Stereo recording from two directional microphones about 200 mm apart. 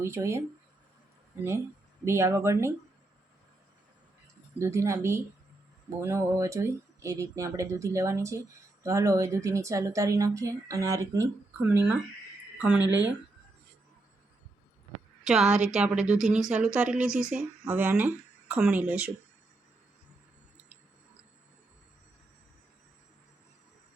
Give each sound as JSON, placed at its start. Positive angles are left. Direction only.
{"t": 0.0, "sound": "speech", "side_deg": -15}
{"t": 2.0, "sound": "speech", "side_deg": -15}
{"t": 4.6, "sound": "speech", "side_deg": -15}
{"t": 15.2, "sound": "a woman's voice", "side_deg": 0}
{"t": 15.4, "sound": "a woman's voice", "side_deg": -35}
{"t": 15.7, "sound": "speech", "side_deg": -5}